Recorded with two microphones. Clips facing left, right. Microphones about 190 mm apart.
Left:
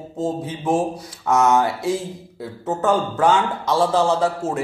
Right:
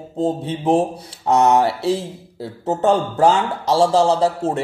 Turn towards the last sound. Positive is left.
turn(degrees=-35)  # may be behind; listen again after turning